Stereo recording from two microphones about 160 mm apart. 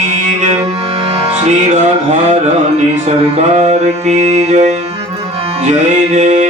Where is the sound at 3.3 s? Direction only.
40° right (ahead or behind).